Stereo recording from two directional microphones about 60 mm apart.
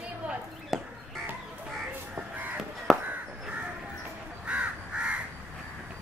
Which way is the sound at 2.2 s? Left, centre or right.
Right.